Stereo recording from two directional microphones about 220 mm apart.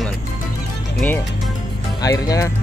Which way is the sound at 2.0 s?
15° left (ahead or behind).